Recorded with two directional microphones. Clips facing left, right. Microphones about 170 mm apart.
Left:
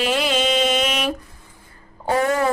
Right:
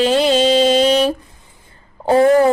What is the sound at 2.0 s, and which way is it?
Speech, 30° right (ahead or behind).